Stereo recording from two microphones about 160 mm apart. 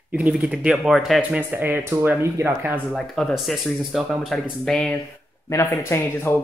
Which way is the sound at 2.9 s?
Centre (ahead or behind).